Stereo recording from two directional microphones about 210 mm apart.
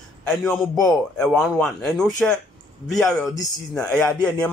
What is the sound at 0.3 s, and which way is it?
A man's voice, 5° left (ahead or behind).